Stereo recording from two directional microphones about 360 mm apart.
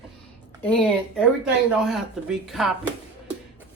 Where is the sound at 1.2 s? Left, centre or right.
Centre.